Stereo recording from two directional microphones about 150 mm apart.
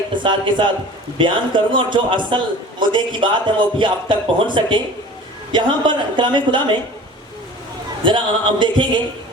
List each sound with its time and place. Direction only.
0.1 s speech: 30° right (ahead or behind)
8.0 s speech: 35° right (ahead or behind)